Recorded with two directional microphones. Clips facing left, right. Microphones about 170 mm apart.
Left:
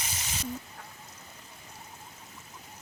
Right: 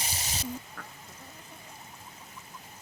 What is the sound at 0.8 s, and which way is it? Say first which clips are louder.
Duck: right 2 dB; 80° right.